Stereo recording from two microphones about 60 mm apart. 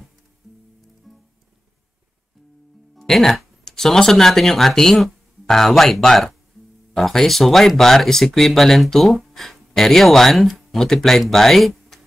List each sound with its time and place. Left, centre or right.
1.1 s music: centre
3.0 s speech: centre